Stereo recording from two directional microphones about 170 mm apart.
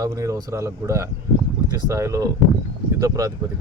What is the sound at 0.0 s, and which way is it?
Speech, 20° right (ahead or behind).